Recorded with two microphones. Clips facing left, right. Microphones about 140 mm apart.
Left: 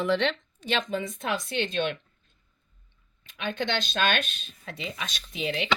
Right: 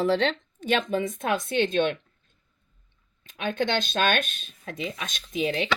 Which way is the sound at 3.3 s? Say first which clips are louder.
Right 3 dB; 50° right (ahead or behind).